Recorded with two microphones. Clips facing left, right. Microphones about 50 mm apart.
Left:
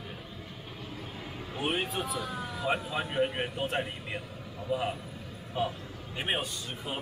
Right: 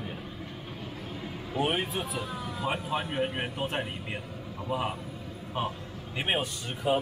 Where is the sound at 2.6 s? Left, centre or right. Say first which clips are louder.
Even; centre.